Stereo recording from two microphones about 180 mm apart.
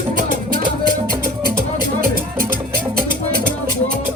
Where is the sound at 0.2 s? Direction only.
45° right (ahead or behind).